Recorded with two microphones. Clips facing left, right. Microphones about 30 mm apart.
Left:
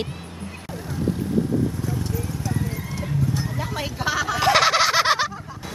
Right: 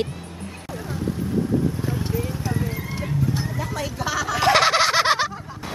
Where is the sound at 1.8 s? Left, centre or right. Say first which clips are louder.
Right 2 dB; right.